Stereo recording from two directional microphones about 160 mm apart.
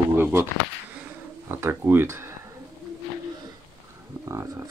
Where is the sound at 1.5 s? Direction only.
15° right (ahead or behind).